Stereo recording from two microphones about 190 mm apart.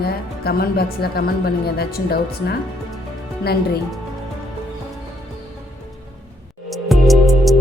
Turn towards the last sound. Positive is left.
turn(degrees=0)  # may be behind; listen again after turning